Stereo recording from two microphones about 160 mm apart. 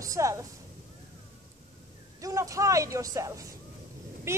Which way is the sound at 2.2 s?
20° right (ahead or behind).